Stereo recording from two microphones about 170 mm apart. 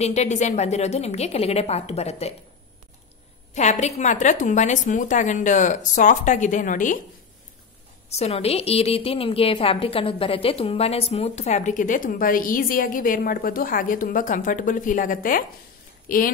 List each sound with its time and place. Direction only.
0.0 s a woman's voice: 40° left (ahead or behind)
3.5 s a woman's voice: 45° left (ahead or behind)
8.2 s a woman's voice: 35° left (ahead or behind); by 16.2 s 55° left (ahead or behind)